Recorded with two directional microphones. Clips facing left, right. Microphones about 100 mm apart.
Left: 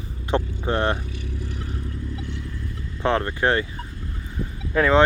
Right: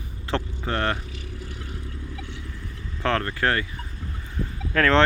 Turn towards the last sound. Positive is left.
turn(degrees=15)  # may be behind; listen again after turning